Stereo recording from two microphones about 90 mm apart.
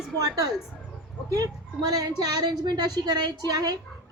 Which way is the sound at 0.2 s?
45° right (ahead or behind).